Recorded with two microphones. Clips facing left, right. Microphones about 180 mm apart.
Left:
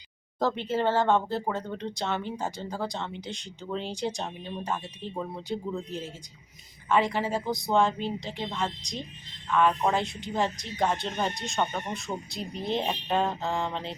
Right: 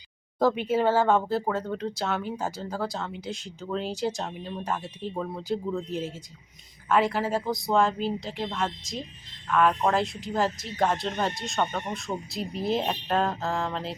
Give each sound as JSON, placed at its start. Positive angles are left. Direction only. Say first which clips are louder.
{"t": 0.3, "sound": "speech", "louder": "right 4 dB", "side_deg": -10}
{"t": 6.8, "sound": "speech", "louder": "right 1 dB", "side_deg": -5}